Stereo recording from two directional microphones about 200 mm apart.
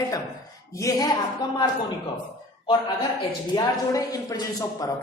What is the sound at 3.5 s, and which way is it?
A man's voice, 15° left (ahead or behind).